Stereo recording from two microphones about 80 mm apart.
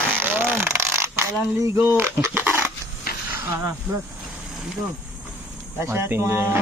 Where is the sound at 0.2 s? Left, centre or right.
Right.